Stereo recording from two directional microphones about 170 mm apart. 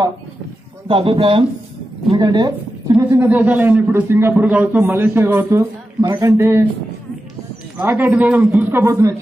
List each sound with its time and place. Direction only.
0.8 s speech: 30° right (ahead or behind)
3.0 s a man's voice: 15° right (ahead or behind)
7.7 s a man's voice: 10° right (ahead or behind)